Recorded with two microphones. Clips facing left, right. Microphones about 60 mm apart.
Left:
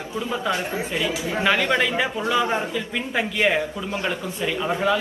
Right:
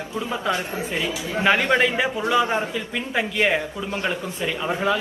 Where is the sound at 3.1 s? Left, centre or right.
Centre.